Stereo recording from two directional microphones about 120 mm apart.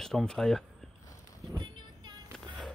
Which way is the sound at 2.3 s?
Centre (ahead or behind).